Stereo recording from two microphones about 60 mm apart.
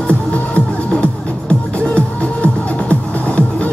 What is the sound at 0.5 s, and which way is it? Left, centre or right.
Music, centre.